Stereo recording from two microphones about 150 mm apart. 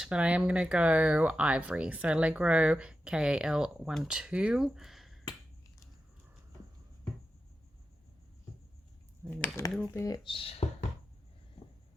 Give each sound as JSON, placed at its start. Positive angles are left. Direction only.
{"t": 0.0, "sound": "speech", "side_deg": -5}
{"t": 9.2, "sound": "speech", "side_deg": -15}
{"t": 9.9, "sound": "speech", "side_deg": 25}
{"t": 10.3, "sound": "speech", "side_deg": 40}